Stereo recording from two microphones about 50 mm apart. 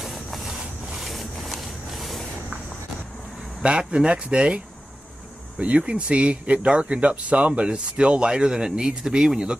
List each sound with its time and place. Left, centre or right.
0.0 s a sound: centre
3.6 s speech: centre
5.6 s speech: right